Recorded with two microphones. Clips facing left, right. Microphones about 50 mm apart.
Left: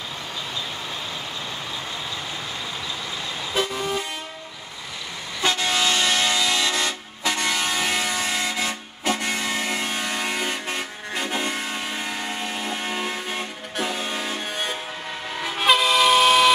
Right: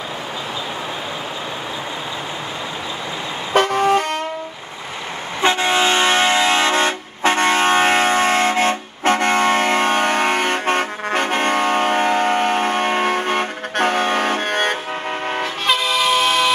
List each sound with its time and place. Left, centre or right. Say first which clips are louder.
3.5 s vehicle: right 11 dB; right
5.4 s vehicle: right 6 dB; right
15.4 s vehicle: left 3 dB; centre